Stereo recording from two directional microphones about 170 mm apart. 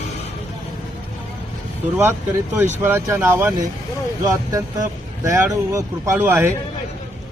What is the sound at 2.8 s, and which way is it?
Speech, 10° right (ahead or behind).